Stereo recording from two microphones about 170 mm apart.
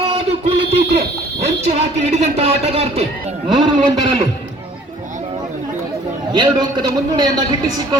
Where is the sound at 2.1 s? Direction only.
35° right (ahead or behind).